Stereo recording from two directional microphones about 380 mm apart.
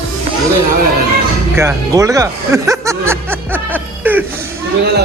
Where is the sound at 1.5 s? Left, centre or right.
Centre.